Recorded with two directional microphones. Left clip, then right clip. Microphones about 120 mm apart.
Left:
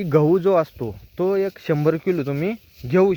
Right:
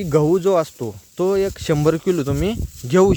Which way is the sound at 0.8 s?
30° right (ahead or behind).